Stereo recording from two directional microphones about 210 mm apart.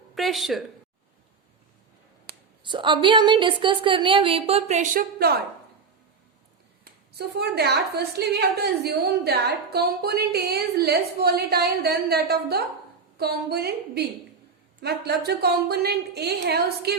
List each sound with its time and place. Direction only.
0.2 s speech: centre (ahead or behind)
2.3 s a sound: 50° right (ahead or behind)
2.6 s a woman's voice: 25° right (ahead or behind); by 5.4 s 45° right (ahead or behind)
6.8 s a woman's voice: 50° right (ahead or behind)